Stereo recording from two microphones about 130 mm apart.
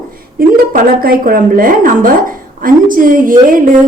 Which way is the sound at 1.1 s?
90° right.